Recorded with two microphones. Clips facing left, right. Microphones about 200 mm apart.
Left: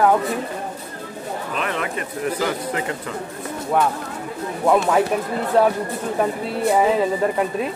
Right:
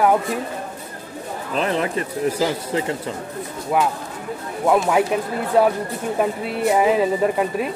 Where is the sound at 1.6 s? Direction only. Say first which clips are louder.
Right 6 dB; 30° right (ahead or behind).